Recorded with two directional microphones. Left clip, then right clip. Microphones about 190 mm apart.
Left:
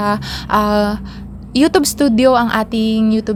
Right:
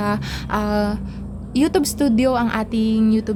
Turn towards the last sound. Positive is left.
turn(degrees=20)  # may be behind; listen again after turning